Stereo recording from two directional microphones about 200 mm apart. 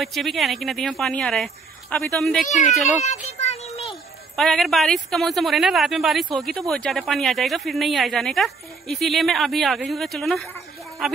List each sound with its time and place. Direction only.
0.0 s a child's voice: centre (ahead or behind)
2.8 s music: 35° left (ahead or behind)
3.8 s a child's voice: centre (ahead or behind)